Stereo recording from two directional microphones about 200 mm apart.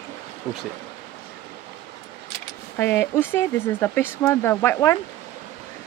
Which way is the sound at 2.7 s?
10° left (ahead or behind).